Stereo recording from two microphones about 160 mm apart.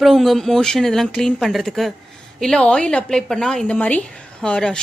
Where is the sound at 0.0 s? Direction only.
Centre (ahead or behind).